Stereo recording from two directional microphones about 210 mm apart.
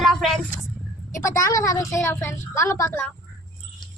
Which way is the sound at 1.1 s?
15° left (ahead or behind).